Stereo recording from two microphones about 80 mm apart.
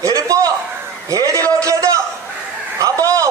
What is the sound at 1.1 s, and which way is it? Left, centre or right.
Speech, right.